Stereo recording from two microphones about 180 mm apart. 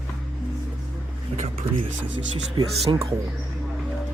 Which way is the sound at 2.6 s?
25° right (ahead or behind).